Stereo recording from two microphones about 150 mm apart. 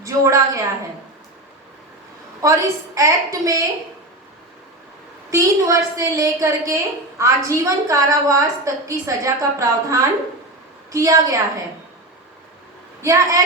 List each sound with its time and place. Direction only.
0.0 s a woman's voice: 20° right (ahead or behind)
2.4 s a woman's voice: 20° right (ahead or behind)
5.3 s a woman's voice: 20° right (ahead or behind)
13.0 s a woman's voice: 20° right (ahead or behind)